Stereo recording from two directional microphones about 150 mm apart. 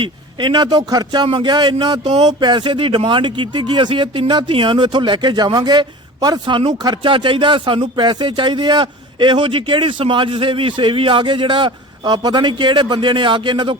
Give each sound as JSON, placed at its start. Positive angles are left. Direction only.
{"t": 0.0, "sound": "speech", "side_deg": -30}